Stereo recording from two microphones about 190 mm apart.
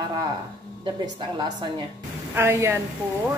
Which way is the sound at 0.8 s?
25° right (ahead or behind).